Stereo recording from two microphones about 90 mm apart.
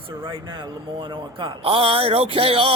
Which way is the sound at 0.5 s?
60° right (ahead or behind).